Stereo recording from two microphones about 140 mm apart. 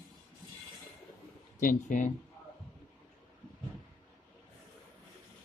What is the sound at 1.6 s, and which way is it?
Speech, 70° left (ahead or behind).